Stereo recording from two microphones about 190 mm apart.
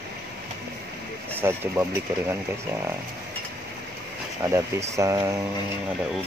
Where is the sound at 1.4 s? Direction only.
10° right (ahead or behind).